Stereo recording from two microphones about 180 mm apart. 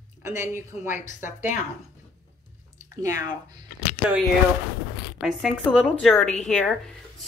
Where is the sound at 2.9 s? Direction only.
15° right (ahead or behind).